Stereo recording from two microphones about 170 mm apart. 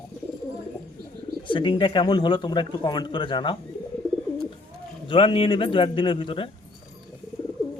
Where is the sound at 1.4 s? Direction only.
30° left (ahead or behind).